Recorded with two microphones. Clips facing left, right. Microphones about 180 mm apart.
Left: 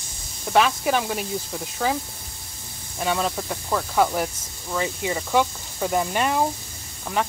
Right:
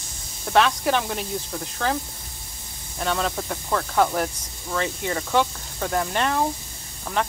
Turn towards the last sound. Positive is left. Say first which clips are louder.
# even
turn(degrees=5)  # may be behind; listen again after turning